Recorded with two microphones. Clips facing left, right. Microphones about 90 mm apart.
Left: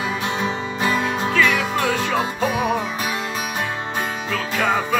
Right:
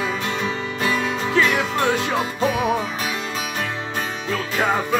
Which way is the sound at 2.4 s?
5° left (ahead or behind).